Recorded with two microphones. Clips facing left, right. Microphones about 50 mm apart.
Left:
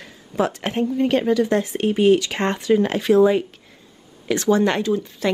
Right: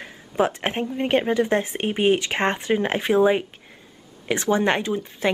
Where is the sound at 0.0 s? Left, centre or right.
Right.